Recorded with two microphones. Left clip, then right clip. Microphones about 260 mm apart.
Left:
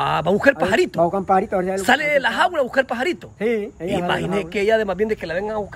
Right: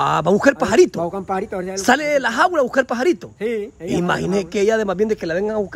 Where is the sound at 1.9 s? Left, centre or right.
Right.